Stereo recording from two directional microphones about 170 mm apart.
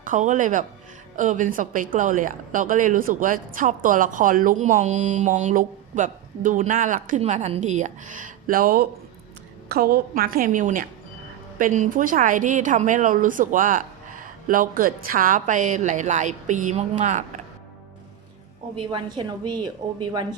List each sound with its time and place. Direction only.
0.0 s a woman's voice: 50° right (ahead or behind)
18.8 s a woman's voice: 25° right (ahead or behind)